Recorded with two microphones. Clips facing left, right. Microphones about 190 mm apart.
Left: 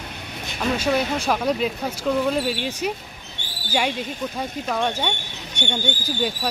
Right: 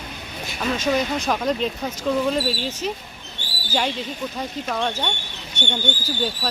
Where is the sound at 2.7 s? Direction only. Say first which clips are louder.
Left 1 dB; 10° left (ahead or behind).